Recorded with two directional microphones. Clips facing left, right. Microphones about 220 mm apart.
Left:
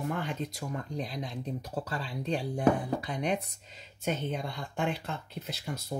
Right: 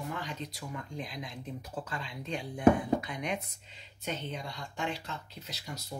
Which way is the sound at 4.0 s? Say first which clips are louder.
Left 5 dB; 50° left (ahead or behind).